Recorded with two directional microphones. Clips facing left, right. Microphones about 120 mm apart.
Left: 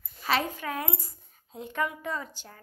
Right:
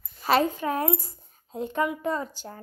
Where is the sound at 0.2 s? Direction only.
35° right (ahead or behind).